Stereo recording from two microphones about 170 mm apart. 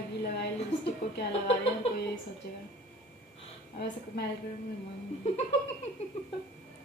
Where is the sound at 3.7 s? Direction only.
75° left (ahead or behind).